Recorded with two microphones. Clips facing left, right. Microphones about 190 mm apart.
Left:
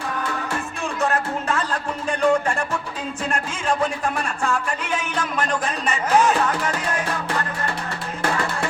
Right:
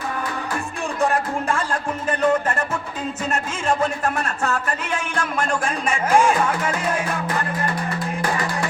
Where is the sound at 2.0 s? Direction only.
5° right (ahead or behind).